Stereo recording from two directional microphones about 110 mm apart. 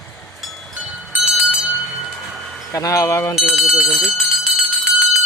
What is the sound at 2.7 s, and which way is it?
Speech, 30° left (ahead or behind).